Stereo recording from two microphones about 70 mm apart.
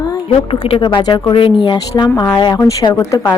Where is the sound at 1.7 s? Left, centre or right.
Left.